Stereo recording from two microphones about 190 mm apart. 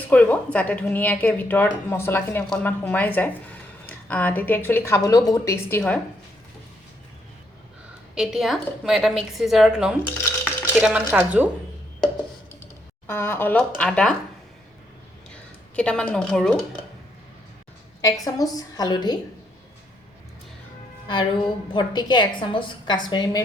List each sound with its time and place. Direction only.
0.1 s a woman's voice: 5° left (ahead or behind)
8.1 s a woman's voice: centre (ahead or behind)
10.0 s rattle: 10° left (ahead or behind)
10.8 s speech: 5° right (ahead or behind)
13.1 s a woman's voice: 10° left (ahead or behind)
15.7 s a woman's voice: 5° left (ahead or behind)
18.3 s a woman's voice: 20° left (ahead or behind)
21.1 s a woman's voice: 25° left (ahead or behind)